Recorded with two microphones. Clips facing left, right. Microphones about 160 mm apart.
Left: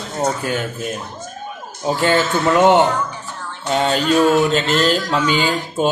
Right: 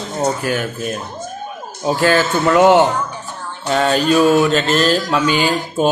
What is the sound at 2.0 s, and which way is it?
Speech, 20° left (ahead or behind).